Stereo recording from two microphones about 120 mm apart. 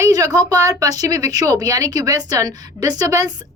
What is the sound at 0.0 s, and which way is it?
A woman's voice, 30° right (ahead or behind).